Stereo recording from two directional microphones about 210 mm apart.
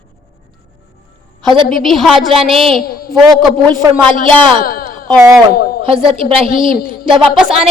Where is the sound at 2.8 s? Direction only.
45° left (ahead or behind).